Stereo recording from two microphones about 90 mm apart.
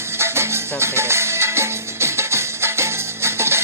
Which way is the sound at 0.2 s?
30° right (ahead or behind).